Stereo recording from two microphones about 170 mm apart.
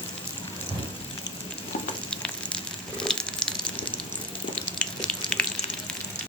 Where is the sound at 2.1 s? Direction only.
5° left (ahead or behind).